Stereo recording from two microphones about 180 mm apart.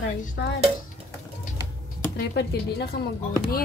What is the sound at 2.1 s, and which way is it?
Speech, 65° left (ahead or behind).